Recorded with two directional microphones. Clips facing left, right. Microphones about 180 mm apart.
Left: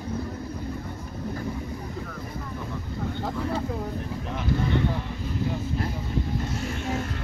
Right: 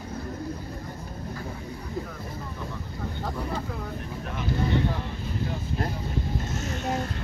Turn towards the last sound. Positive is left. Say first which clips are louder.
# even
turn(degrees=-40)  # may be behind; listen again after turning